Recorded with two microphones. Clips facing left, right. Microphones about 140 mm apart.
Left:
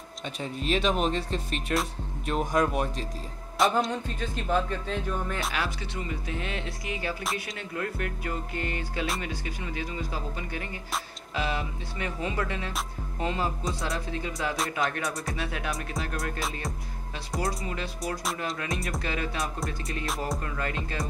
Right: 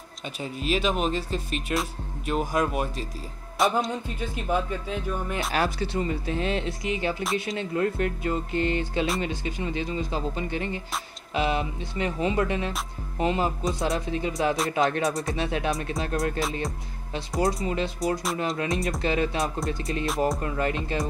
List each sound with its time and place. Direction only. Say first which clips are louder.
0.4 s speech: right 1 dB; 5° right (ahead or behind)
3.5 s music: right 1 dB; centre (ahead or behind)
4.2 s speech: right 1 dB; 10° right (ahead or behind)
5.5 s speech: right 6 dB; 40° right (ahead or behind)
17.6 s speech: right 7 dB; 25° right (ahead or behind)